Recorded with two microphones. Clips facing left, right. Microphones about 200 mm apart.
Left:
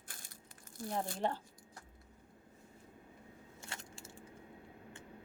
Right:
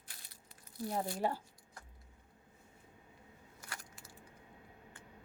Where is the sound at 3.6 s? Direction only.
25° left (ahead or behind).